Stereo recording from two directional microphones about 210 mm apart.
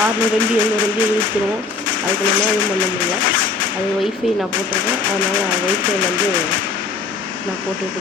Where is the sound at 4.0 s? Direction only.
Centre (ahead or behind).